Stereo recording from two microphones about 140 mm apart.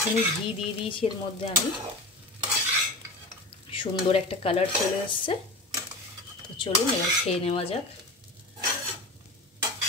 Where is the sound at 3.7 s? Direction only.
40° left (ahead or behind).